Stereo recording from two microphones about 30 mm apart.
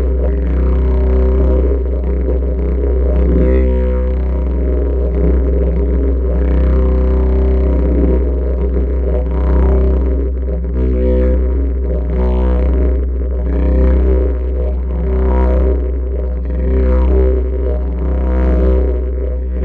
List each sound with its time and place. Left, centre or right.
0.2 s didgeridoo: left
2.2 s music: left
4.6 s didgeridoo: left
10.8 s music: left